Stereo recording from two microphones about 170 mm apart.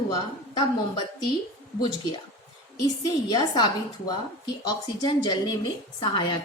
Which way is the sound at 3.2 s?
25° left (ahead or behind).